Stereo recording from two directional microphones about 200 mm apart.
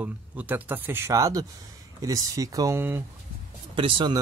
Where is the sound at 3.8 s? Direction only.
25° right (ahead or behind).